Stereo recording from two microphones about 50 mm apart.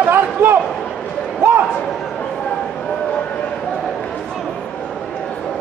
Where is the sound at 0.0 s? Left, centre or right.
Right.